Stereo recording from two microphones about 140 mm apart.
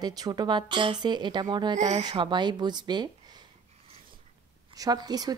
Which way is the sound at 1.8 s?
55° right (ahead or behind).